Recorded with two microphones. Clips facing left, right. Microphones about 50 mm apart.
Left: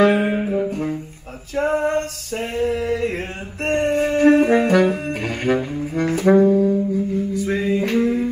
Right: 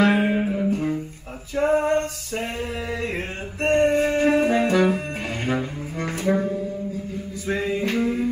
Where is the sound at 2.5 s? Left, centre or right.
Centre.